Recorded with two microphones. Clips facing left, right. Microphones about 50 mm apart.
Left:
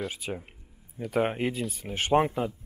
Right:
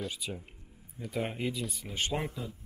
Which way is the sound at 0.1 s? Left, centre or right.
Left.